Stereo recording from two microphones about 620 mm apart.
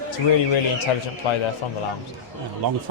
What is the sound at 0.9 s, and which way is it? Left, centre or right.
Speech, left.